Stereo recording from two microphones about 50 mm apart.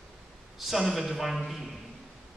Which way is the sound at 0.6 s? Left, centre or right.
Centre.